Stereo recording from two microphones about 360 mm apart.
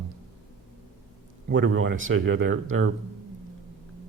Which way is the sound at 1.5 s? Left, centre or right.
Right.